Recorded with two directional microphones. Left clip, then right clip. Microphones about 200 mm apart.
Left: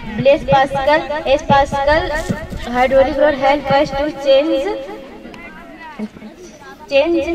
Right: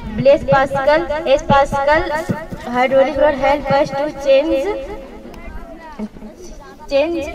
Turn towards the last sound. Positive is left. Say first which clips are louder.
# left 3 dB
turn(degrees=25)  # may be behind; listen again after turning